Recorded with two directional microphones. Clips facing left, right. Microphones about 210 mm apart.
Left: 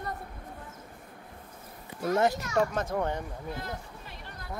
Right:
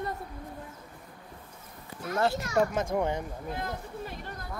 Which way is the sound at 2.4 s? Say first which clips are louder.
Right 1 dB; 10° right (ahead or behind).